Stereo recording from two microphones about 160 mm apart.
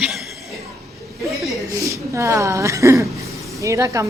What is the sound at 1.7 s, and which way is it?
A woman's voice, 20° right (ahead or behind).